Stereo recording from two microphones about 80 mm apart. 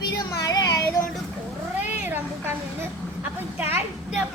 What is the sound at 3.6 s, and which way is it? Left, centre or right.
Speech, right.